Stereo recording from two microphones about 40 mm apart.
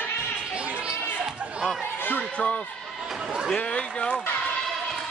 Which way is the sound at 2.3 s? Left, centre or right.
Left.